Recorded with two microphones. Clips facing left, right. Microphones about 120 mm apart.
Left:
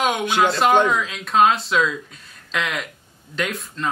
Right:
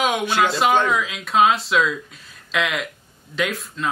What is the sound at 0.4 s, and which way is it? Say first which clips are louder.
Speech: left 2 dB; centre (ahead or behind).